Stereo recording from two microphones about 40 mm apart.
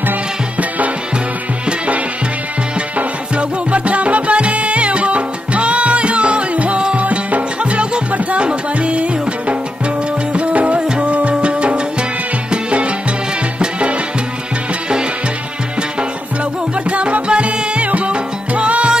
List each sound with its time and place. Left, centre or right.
3.0 s music: right
16.9 s music: right